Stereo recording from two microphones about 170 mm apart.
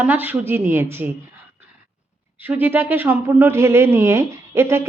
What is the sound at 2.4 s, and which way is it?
Speech, 10° right (ahead or behind).